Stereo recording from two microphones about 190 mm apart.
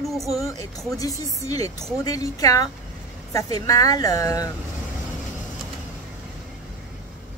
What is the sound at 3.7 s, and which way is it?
Speech, 20° left (ahead or behind).